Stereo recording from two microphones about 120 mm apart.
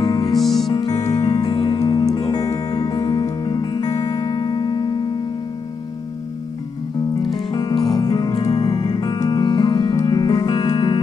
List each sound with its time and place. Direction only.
0.0 s music: 35° left (ahead or behind)
0.4 s music: centre (ahead or behind)
0.7 s music: 35° left (ahead or behind)
7.2 s music: 35° left (ahead or behind)